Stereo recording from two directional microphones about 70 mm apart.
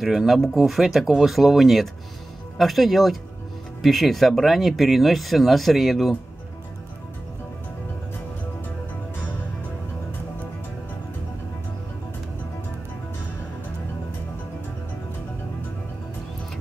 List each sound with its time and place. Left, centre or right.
0.0 s speech: centre